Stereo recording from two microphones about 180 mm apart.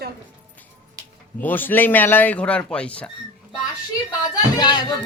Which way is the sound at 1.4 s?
10° left (ahead or behind).